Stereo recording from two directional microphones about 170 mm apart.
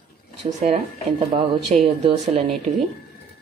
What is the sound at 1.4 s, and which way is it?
Speech, 35° right (ahead or behind).